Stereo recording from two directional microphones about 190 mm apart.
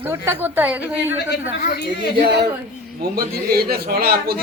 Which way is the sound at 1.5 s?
45° left (ahead or behind).